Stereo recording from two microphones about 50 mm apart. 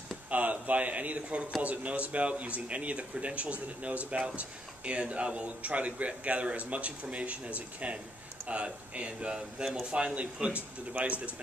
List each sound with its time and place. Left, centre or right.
0.3 s a man's voice: right